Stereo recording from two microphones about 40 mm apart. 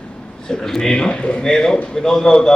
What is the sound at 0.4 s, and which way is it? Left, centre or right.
A man's voice, centre.